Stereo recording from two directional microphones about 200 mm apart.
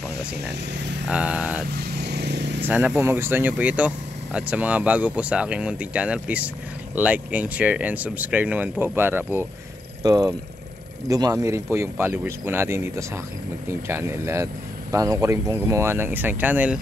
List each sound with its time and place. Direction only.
1.1 s speech: 5° right (ahead or behind)
1.8 s vehicle: 55° right (ahead or behind)
2.6 s speech: 10° right (ahead or behind)